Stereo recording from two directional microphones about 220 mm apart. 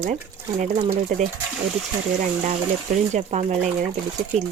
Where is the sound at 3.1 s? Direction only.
30° right (ahead or behind).